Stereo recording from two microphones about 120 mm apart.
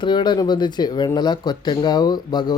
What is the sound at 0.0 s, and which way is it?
Speech, 40° left (ahead or behind).